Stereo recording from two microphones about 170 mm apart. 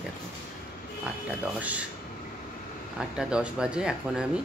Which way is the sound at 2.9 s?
5° right (ahead or behind).